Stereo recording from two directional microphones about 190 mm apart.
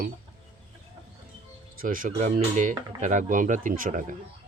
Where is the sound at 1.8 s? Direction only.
45° right (ahead or behind).